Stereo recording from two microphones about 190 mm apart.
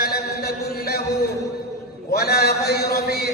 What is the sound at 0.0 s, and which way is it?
Chant, 55° left (ahead or behind).